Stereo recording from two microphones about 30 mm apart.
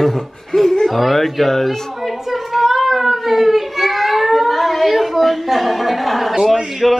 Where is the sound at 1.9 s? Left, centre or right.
Centre.